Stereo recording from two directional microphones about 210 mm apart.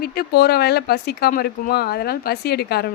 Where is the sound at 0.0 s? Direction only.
45° left (ahead or behind).